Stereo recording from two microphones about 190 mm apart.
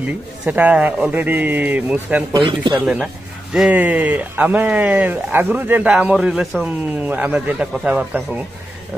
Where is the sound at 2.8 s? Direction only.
5° right (ahead or behind).